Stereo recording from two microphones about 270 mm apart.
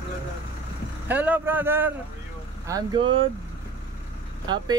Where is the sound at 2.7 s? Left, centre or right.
Centre.